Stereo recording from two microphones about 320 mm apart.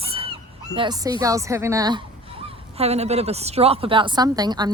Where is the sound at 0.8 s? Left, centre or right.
Centre.